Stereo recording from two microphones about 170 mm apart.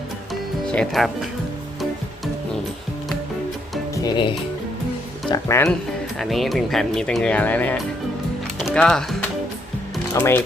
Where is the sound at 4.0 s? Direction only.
30° left (ahead or behind).